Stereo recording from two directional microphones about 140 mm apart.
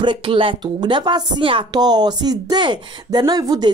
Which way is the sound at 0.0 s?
35° right (ahead or behind).